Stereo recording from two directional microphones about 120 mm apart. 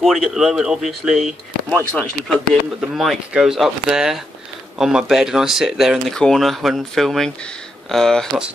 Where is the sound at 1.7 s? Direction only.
10° left (ahead or behind).